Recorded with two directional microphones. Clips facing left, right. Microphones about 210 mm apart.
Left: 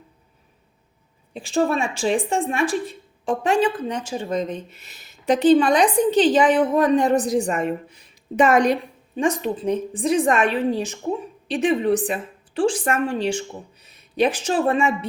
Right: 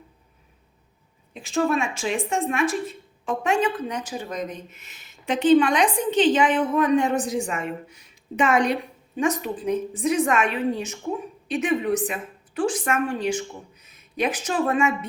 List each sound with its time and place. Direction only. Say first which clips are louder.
1.3 s a woman's voice: left 2 dB; 30° left (ahead or behind)
9.1 s a woman's voice: left 2 dB; 30° left (ahead or behind)